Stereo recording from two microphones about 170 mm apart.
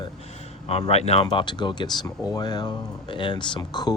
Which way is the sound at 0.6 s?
35° left (ahead or behind).